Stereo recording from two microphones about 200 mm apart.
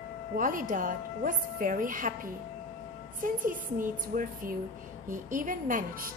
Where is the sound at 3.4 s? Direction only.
45° right (ahead or behind).